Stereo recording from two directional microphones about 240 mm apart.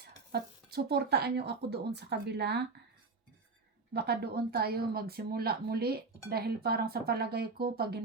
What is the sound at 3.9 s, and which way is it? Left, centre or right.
A woman's voice, right.